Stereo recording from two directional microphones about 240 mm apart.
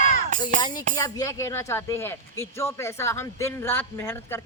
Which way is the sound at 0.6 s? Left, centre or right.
Centre.